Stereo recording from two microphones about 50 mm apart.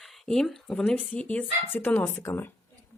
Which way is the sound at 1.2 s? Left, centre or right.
Left.